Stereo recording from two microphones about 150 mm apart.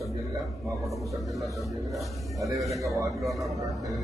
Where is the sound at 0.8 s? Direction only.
Centre (ahead or behind).